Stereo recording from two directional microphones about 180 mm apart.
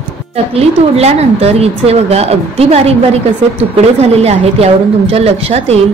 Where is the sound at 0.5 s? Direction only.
35° right (ahead or behind).